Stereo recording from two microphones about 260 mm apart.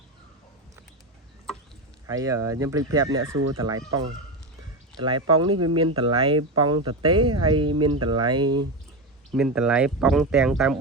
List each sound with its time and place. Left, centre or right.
2.0 s speech: centre
3.3 s speech: right
3.8 s fowl: right
4.9 s speech: centre
9.3 s speech: centre